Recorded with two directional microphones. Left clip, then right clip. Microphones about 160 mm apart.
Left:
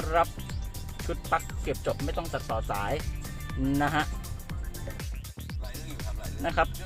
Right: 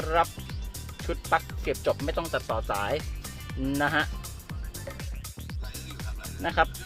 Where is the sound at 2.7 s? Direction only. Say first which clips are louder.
Right 2 dB; 20° right (ahead or behind).